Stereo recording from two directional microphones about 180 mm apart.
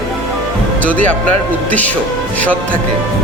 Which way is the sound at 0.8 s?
10° left (ahead or behind).